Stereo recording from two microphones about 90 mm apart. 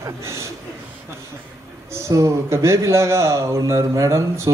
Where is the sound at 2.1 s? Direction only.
35° right (ahead or behind).